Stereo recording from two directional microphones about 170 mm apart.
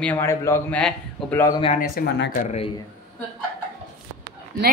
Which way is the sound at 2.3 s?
50° left (ahead or behind).